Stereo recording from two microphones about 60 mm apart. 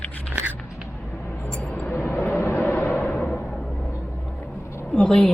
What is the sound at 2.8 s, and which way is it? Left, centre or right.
Music, left.